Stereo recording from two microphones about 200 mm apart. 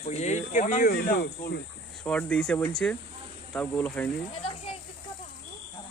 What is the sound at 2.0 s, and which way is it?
Speech, 5° left (ahead or behind).